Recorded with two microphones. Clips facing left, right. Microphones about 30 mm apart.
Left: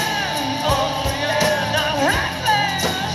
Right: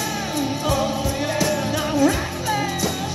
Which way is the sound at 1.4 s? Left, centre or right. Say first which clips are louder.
Left 5 dB; left.